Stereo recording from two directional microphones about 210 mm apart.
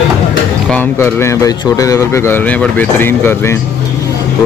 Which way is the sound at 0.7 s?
10° left (ahead or behind).